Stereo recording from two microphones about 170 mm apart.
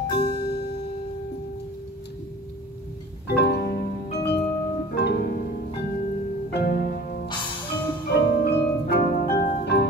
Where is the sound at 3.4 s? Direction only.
75° left (ahead or behind).